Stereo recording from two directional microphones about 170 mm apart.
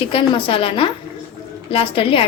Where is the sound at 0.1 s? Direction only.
30° left (ahead or behind).